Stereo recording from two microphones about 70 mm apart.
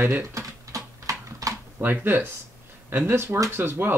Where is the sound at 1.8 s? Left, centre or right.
Right.